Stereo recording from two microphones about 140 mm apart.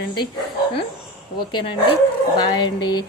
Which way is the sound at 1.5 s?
40° left (ahead or behind).